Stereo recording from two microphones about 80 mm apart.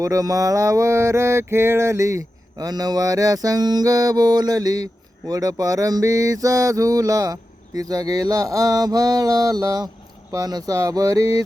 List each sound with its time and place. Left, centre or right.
0.0 s mantra: right